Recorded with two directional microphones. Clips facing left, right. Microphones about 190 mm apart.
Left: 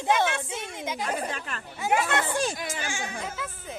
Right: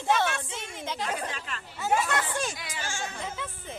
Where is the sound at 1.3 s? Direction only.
50° left (ahead or behind).